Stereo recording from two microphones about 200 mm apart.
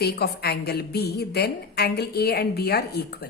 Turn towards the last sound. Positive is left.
turn(degrees=55)  # may be behind; listen again after turning